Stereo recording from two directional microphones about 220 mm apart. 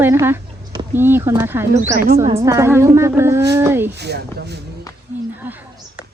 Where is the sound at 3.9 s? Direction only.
50° right (ahead or behind).